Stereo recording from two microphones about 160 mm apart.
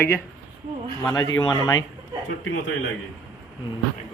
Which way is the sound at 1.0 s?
20° left (ahead or behind).